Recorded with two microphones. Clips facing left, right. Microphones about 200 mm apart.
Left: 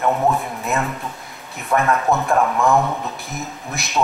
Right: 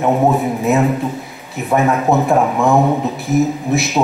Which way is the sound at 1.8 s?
15° right (ahead or behind).